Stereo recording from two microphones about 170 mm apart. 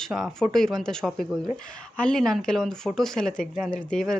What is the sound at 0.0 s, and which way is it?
Speech, centre (ahead or behind).